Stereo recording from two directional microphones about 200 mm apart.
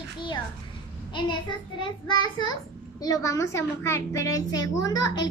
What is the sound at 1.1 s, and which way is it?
A child's voice, 25° left (ahead or behind).